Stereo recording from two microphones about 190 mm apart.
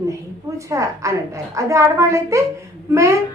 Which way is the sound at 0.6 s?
15° right (ahead or behind).